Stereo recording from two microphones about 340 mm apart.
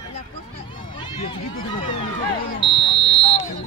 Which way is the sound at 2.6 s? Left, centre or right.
Centre.